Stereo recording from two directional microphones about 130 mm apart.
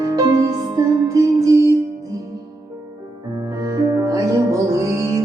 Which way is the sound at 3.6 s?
30° right (ahead or behind).